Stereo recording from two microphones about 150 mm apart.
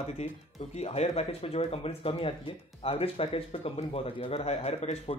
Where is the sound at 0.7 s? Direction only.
45° left (ahead or behind).